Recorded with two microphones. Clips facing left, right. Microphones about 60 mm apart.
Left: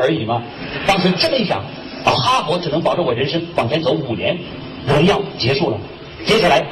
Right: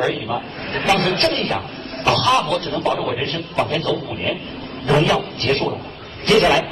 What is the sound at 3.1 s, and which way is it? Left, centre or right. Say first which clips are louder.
Speech: left 5 dB; left.